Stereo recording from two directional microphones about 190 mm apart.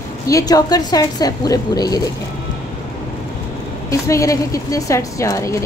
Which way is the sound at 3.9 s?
15° left (ahead or behind).